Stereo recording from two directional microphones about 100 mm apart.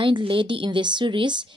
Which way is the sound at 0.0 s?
60° right (ahead or behind).